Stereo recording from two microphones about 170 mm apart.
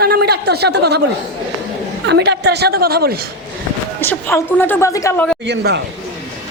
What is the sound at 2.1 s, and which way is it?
A woman's voice, 85° right.